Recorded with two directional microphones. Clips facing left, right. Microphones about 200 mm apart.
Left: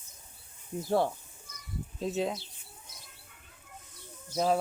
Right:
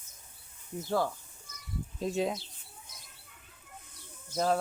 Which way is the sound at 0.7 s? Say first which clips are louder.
Left 3 dB; 25° left (ahead or behind).